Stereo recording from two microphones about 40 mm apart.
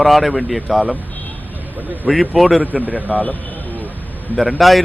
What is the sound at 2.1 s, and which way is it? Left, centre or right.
Speech, centre.